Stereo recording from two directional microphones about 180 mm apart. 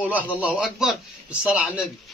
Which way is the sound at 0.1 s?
10° right (ahead or behind).